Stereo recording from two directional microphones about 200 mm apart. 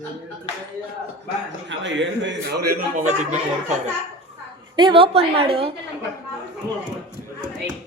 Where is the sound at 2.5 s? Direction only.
50° right (ahead or behind).